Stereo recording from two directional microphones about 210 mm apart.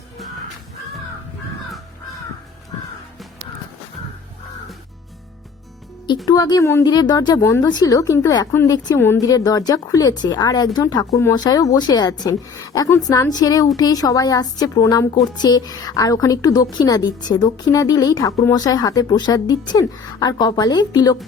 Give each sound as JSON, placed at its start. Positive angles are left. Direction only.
{"t": 6.2, "sound": "speech", "side_deg": 20}